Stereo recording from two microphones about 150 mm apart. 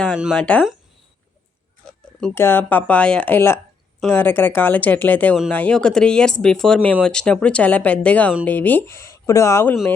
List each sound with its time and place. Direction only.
0.1 s speech: 5° right (ahead or behind)
0.3 s speech: 10° left (ahead or behind)
2.3 s speech: 15° left (ahead or behind)